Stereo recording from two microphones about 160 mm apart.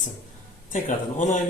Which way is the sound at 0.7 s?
50° left (ahead or behind).